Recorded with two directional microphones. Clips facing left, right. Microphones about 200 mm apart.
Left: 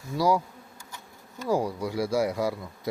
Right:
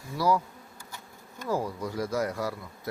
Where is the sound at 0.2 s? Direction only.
10° left (ahead or behind).